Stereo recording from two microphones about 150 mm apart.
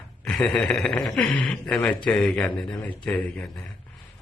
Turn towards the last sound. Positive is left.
turn(degrees=10)  # may be behind; listen again after turning